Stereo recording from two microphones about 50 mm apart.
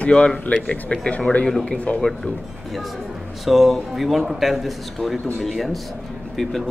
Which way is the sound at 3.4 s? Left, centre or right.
Centre.